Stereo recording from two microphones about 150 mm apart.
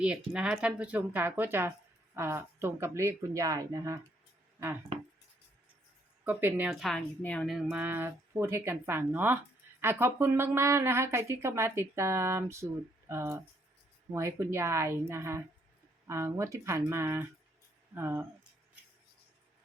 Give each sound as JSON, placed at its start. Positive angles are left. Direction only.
{"t": 0.0, "sound": "speech", "side_deg": -5}
{"t": 6.2, "sound": "speech", "side_deg": -15}
{"t": 6.7, "sound": "a woman's voice", "side_deg": 0}
{"t": 7.2, "sound": "speech", "side_deg": 10}
{"t": 7.4, "sound": "speech", "side_deg": -5}